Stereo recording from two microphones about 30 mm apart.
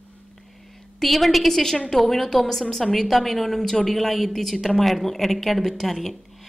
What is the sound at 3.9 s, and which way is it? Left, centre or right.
A woman's voice, centre.